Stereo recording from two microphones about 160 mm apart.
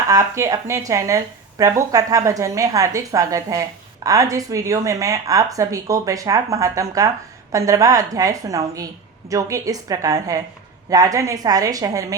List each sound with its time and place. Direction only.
0.1 s speech: 20° right (ahead or behind)